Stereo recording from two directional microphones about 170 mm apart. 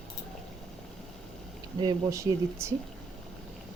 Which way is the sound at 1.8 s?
20° right (ahead or behind).